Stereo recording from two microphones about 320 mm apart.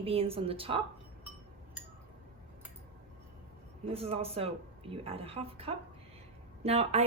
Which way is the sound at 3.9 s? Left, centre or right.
Centre.